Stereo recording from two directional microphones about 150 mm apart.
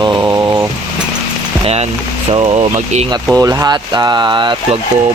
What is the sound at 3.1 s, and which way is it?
Speech, 25° right (ahead or behind).